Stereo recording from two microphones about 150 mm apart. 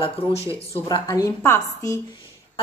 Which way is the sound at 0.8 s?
25° left (ahead or behind).